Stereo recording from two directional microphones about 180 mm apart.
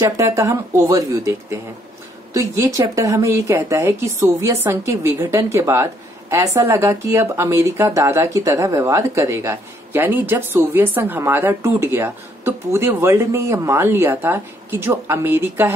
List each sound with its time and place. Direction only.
0.0 s speech: 15° right (ahead or behind)